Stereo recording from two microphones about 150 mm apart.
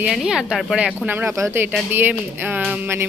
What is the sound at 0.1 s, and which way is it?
Speech, 5° right (ahead or behind).